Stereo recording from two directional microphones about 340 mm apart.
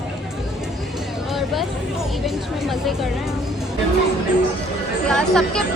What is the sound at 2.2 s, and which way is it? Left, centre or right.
A woman's voice, centre.